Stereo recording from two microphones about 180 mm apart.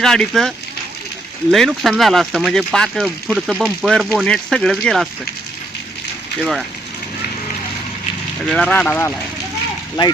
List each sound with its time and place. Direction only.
0.0 s speech: 5° left (ahead or behind)
8.4 s speech: 5° left (ahead or behind)
10.0 s speech: 25° left (ahead or behind)